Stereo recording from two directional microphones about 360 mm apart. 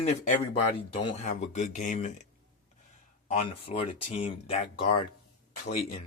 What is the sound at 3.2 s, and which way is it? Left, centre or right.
Speech, centre.